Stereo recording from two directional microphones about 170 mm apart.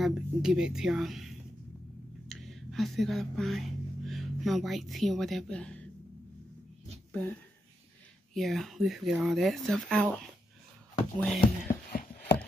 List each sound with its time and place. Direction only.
0.0 s speech: 5° right (ahead or behind)
7.1 s speech: 10° left (ahead or behind)
8.4 s speech: centre (ahead or behind)
11.9 s a sound: 55° left (ahead or behind)